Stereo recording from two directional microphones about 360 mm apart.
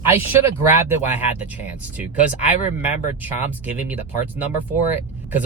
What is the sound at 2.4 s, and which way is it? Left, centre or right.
Speech, centre.